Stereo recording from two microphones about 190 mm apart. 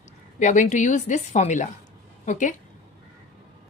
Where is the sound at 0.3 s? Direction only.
40° left (ahead or behind).